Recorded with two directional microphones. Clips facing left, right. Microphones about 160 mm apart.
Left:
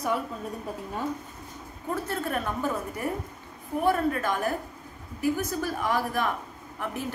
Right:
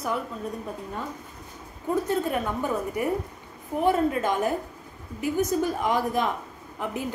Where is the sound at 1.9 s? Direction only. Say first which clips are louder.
Right 5 dB; 15° right (ahead or behind).